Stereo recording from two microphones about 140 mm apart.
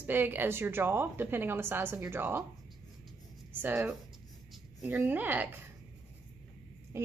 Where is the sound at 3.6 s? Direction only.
15° right (ahead or behind).